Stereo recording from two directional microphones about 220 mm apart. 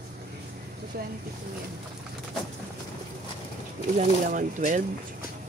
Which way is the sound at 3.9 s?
35° right (ahead or behind).